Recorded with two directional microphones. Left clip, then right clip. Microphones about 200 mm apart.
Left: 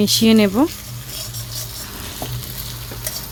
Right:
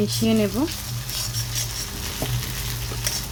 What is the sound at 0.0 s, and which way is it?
Speech, 45° left (ahead or behind).